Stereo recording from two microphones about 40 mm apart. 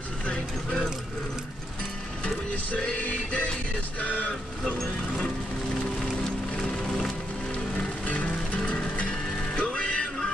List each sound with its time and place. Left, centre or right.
2.8 s music: left
4.0 s music: left
4.7 s music: centre
6.2 s music: centre
7.7 s music: left
8.5 s music: left